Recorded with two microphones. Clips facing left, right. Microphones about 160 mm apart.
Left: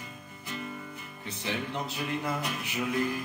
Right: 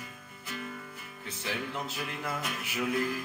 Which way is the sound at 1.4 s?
5° right (ahead or behind).